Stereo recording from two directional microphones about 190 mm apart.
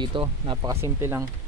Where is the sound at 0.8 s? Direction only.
15° right (ahead or behind).